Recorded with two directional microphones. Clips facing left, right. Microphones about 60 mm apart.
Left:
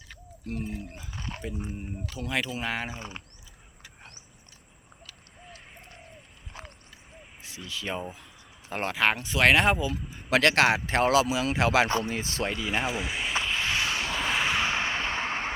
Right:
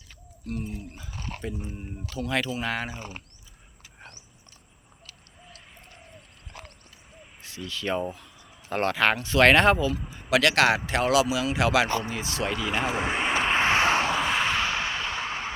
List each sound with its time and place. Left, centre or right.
0.4 s speech: left
1.5 s speech: centre
2.1 s speech: centre
7.4 s speech: centre
10.2 s speech: left
12.5 s speech: right
12.8 s vehicle: right
14.1 s vehicle: centre
14.6 s a sound: left